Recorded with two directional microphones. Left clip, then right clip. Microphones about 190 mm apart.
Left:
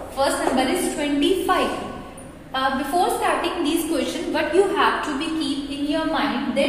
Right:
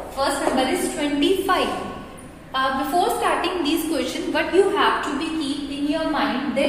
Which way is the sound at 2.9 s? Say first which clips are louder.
Even; 15° right (ahead or behind).